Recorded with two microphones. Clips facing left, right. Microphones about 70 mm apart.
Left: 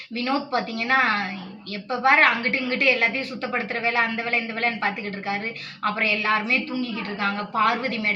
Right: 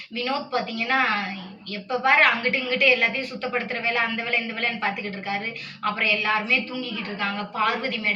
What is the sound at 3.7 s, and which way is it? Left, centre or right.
Speech, left.